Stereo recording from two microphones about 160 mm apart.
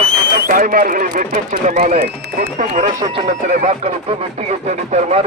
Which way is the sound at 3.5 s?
45° right (ahead or behind).